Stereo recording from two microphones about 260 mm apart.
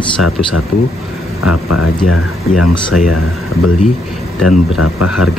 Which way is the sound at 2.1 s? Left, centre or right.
Left.